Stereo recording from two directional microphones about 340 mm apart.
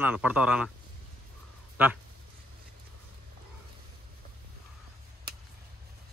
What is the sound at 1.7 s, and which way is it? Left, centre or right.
Speech, centre.